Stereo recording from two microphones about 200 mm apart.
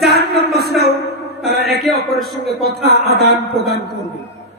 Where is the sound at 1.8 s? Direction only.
Centre (ahead or behind).